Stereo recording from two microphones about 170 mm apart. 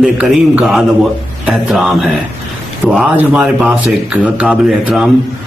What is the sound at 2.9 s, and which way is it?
Speech, 10° right (ahead or behind).